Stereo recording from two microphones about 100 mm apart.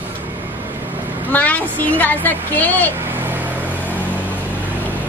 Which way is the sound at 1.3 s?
15° left (ahead or behind).